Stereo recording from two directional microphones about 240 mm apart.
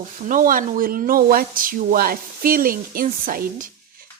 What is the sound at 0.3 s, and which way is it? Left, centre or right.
Speech, right.